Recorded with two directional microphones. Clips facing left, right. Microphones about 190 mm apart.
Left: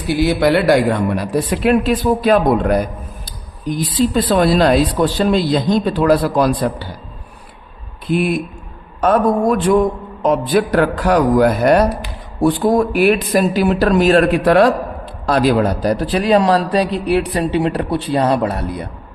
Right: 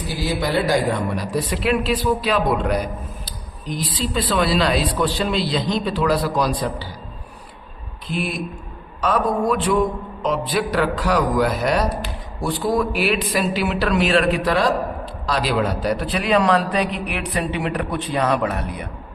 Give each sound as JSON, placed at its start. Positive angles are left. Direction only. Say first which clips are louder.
{"t": 0.1, "sound": "a man's voice", "louder": "left 9 dB", "side_deg": 65}
{"t": 8.1, "sound": "a man's voice", "louder": "left 8 dB", "side_deg": 55}